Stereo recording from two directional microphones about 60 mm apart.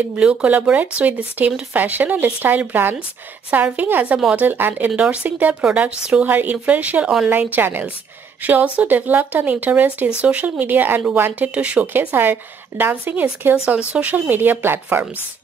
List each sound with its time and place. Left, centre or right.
0.2 s speech: right
3.4 s speech: right
11.4 s speech: right
12.1 s speech: right
13.7 s speech: centre
14.1 s speech: right